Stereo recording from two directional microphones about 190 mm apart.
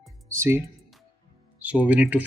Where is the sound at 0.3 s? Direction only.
15° right (ahead or behind).